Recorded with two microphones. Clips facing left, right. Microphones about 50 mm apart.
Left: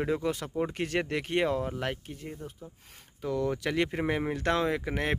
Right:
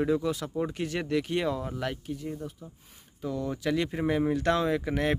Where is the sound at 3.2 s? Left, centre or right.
Left.